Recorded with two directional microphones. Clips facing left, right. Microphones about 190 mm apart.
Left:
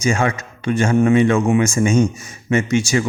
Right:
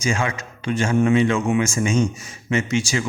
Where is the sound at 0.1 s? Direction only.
45° left (ahead or behind).